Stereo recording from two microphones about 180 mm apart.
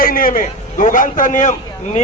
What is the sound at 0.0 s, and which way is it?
A man's voice, 50° left (ahead or behind).